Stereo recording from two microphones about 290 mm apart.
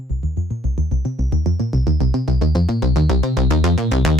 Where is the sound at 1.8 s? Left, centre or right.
Centre.